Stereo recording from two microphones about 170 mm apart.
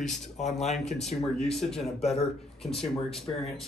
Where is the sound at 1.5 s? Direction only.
5° left (ahead or behind).